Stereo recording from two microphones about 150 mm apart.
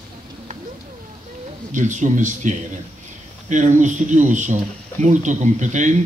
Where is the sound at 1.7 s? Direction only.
55° right (ahead or behind).